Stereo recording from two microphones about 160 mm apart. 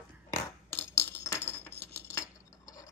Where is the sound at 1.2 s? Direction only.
15° left (ahead or behind).